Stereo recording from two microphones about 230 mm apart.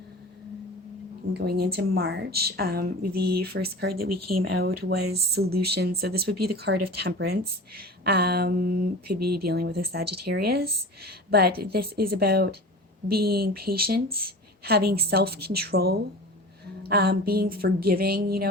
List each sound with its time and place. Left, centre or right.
1.3 s speech: right
4.1 s speech: right
4.9 s a woman's voice: right